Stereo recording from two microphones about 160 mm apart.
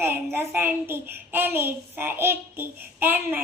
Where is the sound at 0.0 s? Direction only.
15° right (ahead or behind).